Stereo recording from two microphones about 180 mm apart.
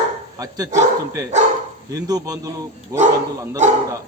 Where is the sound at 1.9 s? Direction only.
20° right (ahead or behind).